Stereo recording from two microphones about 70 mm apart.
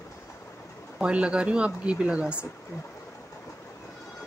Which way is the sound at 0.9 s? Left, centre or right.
Centre.